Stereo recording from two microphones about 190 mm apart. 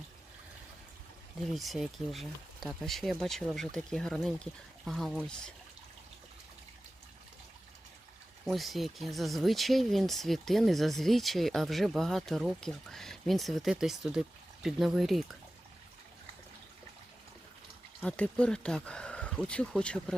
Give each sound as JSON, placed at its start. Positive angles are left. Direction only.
{"t": 1.5, "sound": "speech", "side_deg": 0}
{"t": 8.5, "sound": "speech", "side_deg": 0}
{"t": 18.0, "sound": "speech", "side_deg": 5}